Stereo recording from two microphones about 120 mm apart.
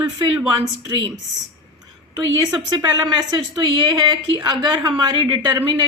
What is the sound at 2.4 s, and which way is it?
Speech, 30° right (ahead or behind).